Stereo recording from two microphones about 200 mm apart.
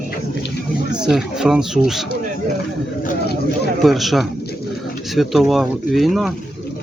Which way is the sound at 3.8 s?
Centre (ahead or behind).